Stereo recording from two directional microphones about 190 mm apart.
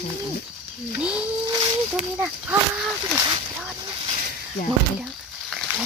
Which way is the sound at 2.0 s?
10° right (ahead or behind).